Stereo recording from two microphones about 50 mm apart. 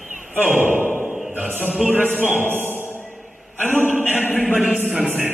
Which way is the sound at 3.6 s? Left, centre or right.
Right.